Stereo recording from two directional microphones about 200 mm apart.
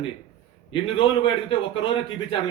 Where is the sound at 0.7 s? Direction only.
25° left (ahead or behind).